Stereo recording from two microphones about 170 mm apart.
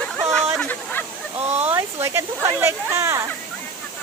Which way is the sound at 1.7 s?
15° right (ahead or behind).